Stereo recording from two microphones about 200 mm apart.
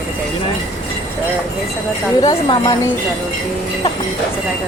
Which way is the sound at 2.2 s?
25° left (ahead or behind).